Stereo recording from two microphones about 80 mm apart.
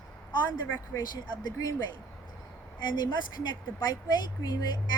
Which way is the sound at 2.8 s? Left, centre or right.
Left.